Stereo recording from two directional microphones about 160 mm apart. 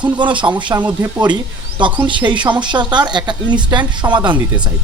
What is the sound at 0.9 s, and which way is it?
Speech, 10° right (ahead or behind).